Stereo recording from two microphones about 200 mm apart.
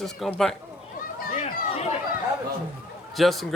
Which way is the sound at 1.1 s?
40° left (ahead or behind).